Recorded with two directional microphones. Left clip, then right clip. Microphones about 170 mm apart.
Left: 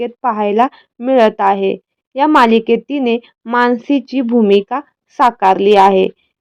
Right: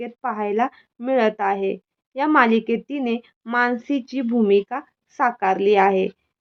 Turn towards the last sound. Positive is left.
turn(degrees=40)  # may be behind; listen again after turning